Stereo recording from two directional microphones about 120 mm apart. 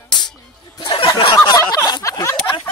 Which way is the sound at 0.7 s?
45° left (ahead or behind).